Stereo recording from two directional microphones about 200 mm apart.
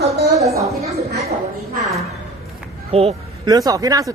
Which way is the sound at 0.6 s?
15° right (ahead or behind).